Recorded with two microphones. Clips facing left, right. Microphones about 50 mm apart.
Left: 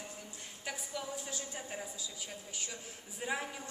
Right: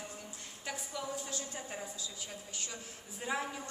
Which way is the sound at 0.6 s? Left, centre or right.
Centre.